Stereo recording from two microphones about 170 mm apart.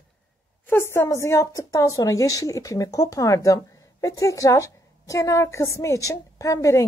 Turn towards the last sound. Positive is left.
turn(degrees=20)  # may be behind; listen again after turning